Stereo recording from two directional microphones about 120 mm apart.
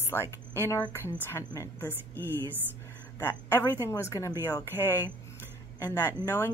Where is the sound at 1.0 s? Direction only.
20° left (ahead or behind).